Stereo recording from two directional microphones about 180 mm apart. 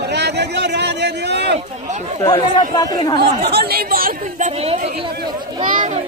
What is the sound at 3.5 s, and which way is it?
A child's voice, 60° right (ahead or behind).